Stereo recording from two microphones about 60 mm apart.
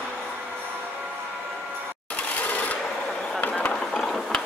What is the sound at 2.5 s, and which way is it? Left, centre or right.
Filing, left.